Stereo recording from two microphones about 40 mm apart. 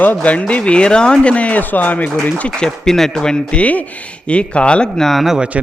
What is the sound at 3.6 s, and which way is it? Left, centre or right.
Speech, left.